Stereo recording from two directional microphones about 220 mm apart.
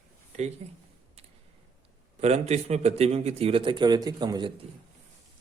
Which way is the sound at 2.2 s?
30° right (ahead or behind).